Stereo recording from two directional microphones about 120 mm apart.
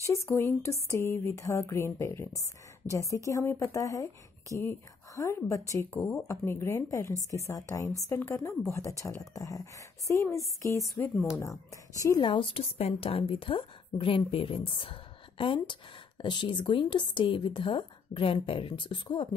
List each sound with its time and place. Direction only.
0.1 s speech: 25° left (ahead or behind)
12.2 s a woman's voice: 45° left (ahead or behind)